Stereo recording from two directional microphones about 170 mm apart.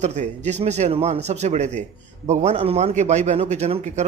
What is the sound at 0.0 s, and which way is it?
A man's voice, 45° right (ahead or behind).